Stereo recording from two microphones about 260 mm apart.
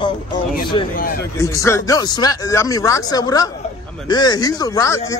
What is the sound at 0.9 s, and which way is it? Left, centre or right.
Speech, left.